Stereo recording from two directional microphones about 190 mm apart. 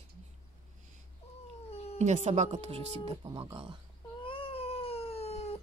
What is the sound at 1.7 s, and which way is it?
Cat, 35° left (ahead or behind).